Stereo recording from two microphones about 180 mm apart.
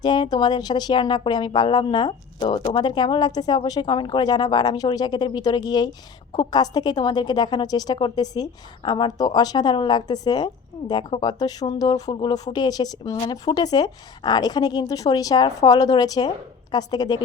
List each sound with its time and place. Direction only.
0.0 s a woman's voice: 25° left (ahead or behind)